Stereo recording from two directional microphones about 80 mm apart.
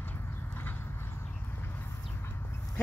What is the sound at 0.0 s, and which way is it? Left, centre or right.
Horse, left.